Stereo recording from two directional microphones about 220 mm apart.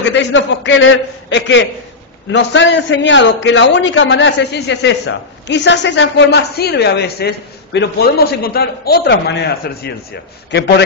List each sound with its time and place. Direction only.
0.0 s a man's voice: 55° left (ahead or behind)